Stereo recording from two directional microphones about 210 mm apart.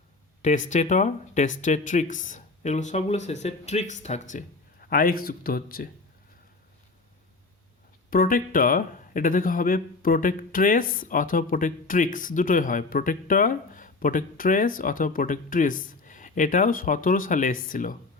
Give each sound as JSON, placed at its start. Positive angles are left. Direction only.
{"t": 0.7, "sound": "speech", "side_deg": 35}
{"t": 8.1, "sound": "speech", "side_deg": 40}